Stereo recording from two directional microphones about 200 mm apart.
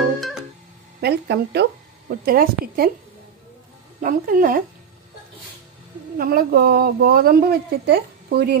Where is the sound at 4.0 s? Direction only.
45° right (ahead or behind).